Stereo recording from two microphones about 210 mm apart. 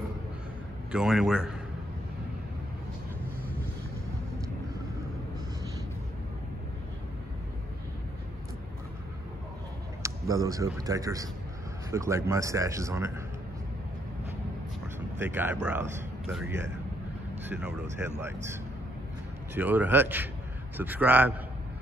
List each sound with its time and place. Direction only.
0.9 s a man's voice: centre (ahead or behind)
10.0 s a man's voice: 15° right (ahead or behind)
15.1 s a man's voice: 10° right (ahead or behind)